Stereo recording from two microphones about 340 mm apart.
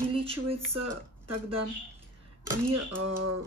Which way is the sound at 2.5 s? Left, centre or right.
Right.